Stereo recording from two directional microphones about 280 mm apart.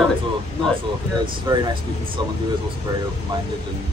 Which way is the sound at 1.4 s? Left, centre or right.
Centre.